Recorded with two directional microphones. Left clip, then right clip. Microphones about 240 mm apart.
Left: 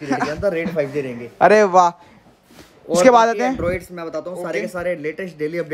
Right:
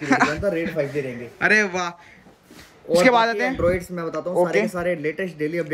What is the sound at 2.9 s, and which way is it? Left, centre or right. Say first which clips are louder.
Speech: left 4 dB; centre.